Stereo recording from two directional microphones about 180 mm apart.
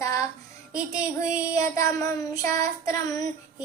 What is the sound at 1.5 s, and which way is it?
Child singing, 20° left (ahead or behind).